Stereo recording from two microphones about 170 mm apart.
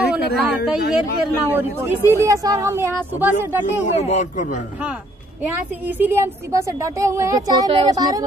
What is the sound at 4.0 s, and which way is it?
Speech, 45° left (ahead or behind).